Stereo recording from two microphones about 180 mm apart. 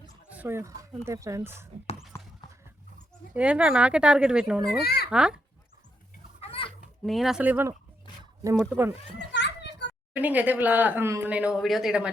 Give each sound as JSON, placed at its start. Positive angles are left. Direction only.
{"t": 0.3, "sound": "speech", "side_deg": -10}
{"t": 3.3, "sound": "speech", "side_deg": -5}
{"t": 4.8, "sound": "a child's voice", "side_deg": 60}
{"t": 5.1, "sound": "speech", "side_deg": -5}
{"t": 6.4, "sound": "chicken", "side_deg": 30}
{"t": 7.0, "sound": "speech", "side_deg": 0}
{"t": 8.2, "sound": "wild animals", "side_deg": -20}
{"t": 8.6, "sound": "speech", "side_deg": -10}
{"t": 9.3, "sound": "children playing", "side_deg": 70}
{"t": 10.2, "sound": "speech", "side_deg": -10}